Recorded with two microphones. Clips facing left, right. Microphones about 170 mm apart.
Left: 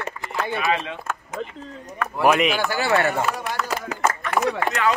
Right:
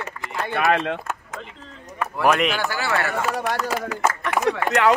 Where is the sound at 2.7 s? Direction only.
20° left (ahead or behind).